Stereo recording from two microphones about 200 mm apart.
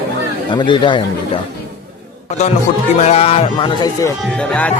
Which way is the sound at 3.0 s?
30° left (ahead or behind).